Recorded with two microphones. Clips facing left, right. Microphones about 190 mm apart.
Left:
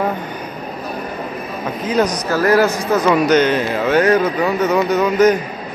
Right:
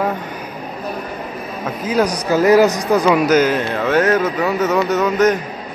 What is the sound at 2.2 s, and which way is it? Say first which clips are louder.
Speech: right 5 dB; 15° right (ahead or behind).